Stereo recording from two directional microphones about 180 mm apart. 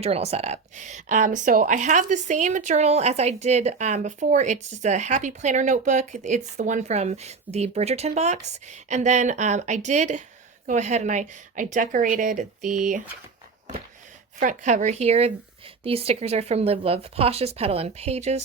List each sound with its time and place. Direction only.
0.0 s a woman's voice: 35° right (ahead or behind)
14.3 s speech: 40° right (ahead or behind)